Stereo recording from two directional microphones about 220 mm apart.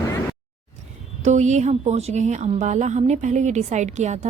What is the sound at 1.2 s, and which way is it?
Speech, 30° right (ahead or behind).